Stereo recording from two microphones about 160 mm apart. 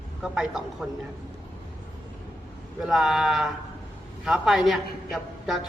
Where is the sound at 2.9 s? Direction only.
Centre (ahead or behind).